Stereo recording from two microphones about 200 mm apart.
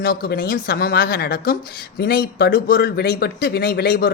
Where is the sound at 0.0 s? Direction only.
50° left (ahead or behind).